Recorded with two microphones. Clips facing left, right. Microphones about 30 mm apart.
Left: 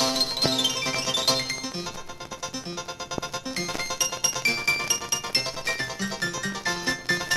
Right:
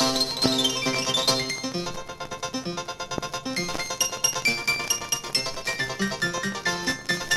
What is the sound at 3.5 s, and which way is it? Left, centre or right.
Music, centre.